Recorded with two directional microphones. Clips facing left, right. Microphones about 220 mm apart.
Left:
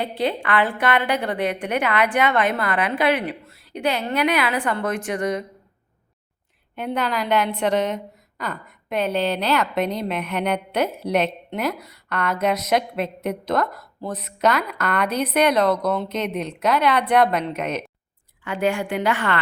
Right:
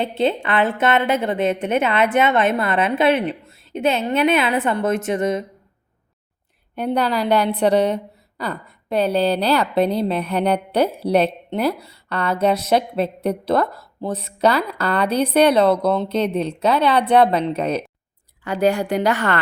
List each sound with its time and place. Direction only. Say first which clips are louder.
0.0 s a woman's voice: right 4 dB; 25° right (ahead or behind)
6.7 s a woman's voice: right 4 dB; 35° right (ahead or behind)